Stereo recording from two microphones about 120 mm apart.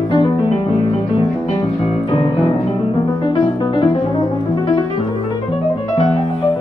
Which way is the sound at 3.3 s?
45° left (ahead or behind).